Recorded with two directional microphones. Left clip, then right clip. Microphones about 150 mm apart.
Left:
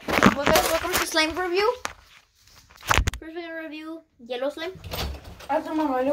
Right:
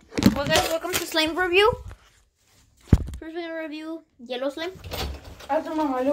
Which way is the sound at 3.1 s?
30° right (ahead or behind).